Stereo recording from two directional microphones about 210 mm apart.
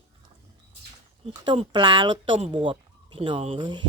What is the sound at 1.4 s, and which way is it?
Speech, 20° right (ahead or behind).